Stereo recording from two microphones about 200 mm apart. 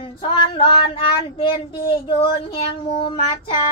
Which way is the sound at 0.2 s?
25° left (ahead or behind).